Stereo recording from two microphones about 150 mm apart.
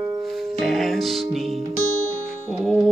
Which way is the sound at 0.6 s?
Centre (ahead or behind).